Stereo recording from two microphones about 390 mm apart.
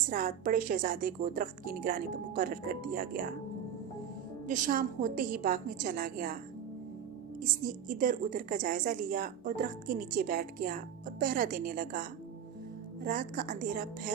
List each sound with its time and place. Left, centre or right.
0.1 s a woman's voice: right
4.4 s a woman's voice: centre
7.4 s a woman's voice: centre